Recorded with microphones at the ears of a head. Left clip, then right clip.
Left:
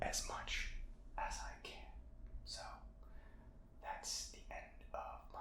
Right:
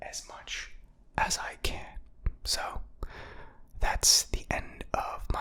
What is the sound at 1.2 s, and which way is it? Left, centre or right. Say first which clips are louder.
Whispering: right 15 dB; right.